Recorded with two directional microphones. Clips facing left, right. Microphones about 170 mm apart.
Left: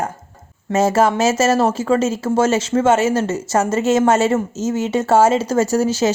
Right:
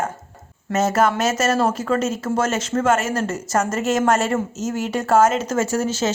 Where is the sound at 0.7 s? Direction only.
30° left (ahead or behind).